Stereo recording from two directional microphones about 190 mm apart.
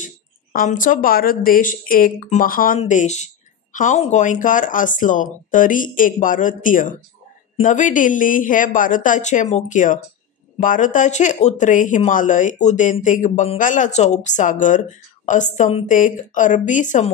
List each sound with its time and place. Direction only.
0.0 s speech: 45° left (ahead or behind)